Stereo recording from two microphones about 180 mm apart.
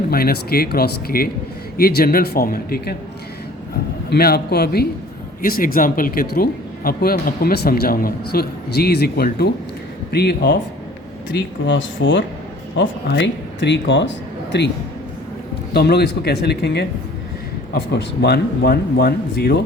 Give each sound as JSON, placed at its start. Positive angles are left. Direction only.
{"t": 0.1, "sound": "speech", "side_deg": 55}
{"t": 4.1, "sound": "speech", "side_deg": 60}
{"t": 11.3, "sound": "speech", "side_deg": 85}
{"t": 14.5, "sound": "a man's voice", "side_deg": 75}
{"t": 15.7, "sound": "speech", "side_deg": 65}